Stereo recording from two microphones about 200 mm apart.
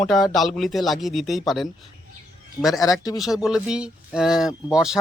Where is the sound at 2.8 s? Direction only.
20° left (ahead or behind).